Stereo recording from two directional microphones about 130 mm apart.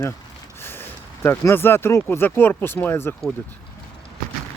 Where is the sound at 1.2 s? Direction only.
20° left (ahead or behind).